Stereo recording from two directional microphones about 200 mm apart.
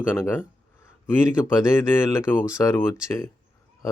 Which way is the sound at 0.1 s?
10° left (ahead or behind).